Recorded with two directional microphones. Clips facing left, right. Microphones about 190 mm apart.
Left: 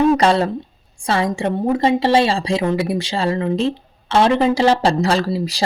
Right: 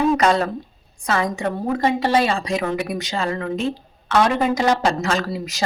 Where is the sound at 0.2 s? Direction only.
30° left (ahead or behind).